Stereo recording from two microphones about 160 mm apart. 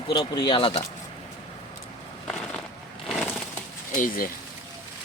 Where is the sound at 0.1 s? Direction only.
30° left (ahead or behind).